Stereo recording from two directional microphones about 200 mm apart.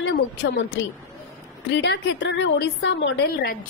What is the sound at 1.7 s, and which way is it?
A woman's voice, 60° left (ahead or behind).